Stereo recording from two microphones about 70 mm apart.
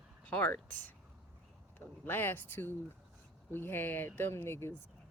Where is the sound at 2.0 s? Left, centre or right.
Left.